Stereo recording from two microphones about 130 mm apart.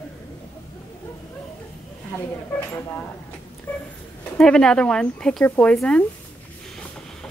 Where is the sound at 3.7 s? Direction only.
15° left (ahead or behind).